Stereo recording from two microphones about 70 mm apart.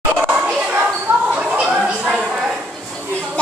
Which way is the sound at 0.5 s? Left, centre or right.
Centre.